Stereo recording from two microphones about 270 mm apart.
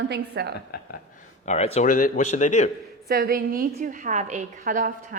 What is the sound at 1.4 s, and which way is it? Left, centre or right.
A man's voice, left.